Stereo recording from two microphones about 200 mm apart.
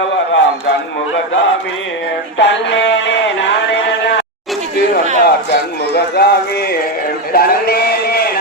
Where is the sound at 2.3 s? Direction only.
60° left (ahead or behind).